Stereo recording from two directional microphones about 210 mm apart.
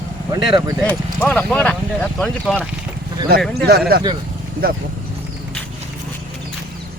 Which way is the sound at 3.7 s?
45° right (ahead or behind).